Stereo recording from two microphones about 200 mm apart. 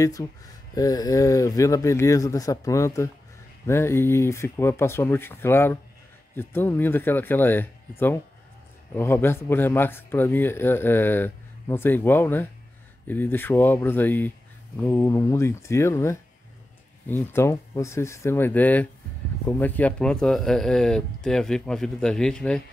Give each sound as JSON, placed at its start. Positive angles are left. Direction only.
{"t": 0.0, "sound": "speech", "side_deg": 15}
{"t": 8.9, "sound": "speech", "side_deg": 10}